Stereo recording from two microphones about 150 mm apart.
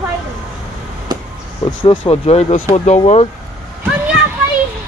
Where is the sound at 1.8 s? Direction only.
35° left (ahead or behind).